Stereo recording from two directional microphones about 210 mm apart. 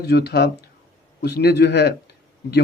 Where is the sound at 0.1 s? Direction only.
50° left (ahead or behind).